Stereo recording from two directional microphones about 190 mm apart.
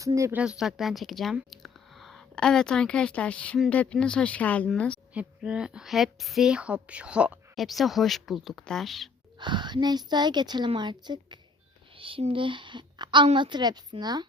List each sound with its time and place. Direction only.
0.0 s speech: 15° right (ahead or behind); by 4.9 s 5° left (ahead or behind)
5.1 s speech: 5° right (ahead or behind)
9.4 s a woman's voice: 25° right (ahead or behind)